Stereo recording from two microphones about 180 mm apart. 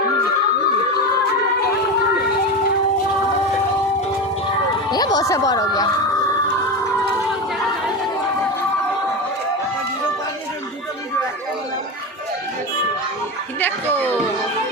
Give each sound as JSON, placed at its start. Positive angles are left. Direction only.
{"t": 4.9, "sound": "speech", "side_deg": 20}
{"t": 13.9, "sound": "chatter", "side_deg": 10}